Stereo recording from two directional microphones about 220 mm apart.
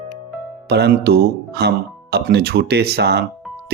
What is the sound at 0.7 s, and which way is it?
Speech, 50° right (ahead or behind).